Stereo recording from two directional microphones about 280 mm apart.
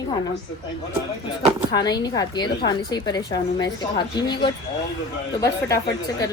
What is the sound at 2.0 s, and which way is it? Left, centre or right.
A woman's voice, centre.